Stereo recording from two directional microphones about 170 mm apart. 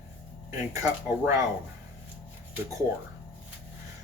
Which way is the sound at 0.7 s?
15° right (ahead or behind).